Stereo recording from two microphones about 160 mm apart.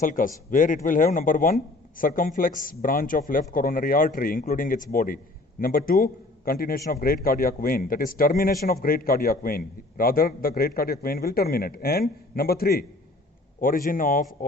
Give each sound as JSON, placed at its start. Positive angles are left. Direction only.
{"t": 0.0, "sound": "a man's voice", "side_deg": 55}
{"t": 13.6, "sound": "a man's voice", "side_deg": 60}